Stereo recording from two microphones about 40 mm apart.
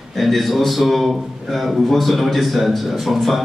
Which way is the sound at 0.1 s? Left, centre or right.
Centre.